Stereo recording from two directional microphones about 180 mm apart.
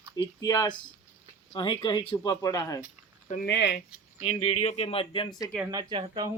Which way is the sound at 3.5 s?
75° left (ahead or behind).